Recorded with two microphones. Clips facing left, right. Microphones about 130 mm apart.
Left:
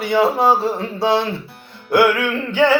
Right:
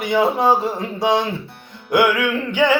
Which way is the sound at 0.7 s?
15° right (ahead or behind).